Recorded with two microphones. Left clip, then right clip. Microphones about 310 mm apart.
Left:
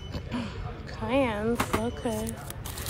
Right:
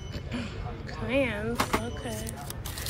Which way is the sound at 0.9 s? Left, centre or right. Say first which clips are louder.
Left 1 dB; centre.